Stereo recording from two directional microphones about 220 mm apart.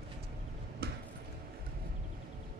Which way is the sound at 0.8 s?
45° right (ahead or behind).